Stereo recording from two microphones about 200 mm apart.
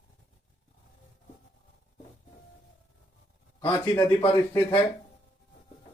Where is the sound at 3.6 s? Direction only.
15° left (ahead or behind).